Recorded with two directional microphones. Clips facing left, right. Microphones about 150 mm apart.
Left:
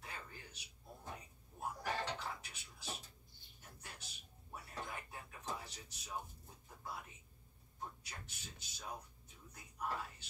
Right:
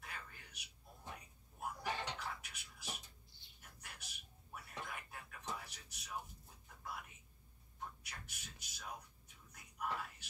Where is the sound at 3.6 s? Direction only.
30° left (ahead or behind).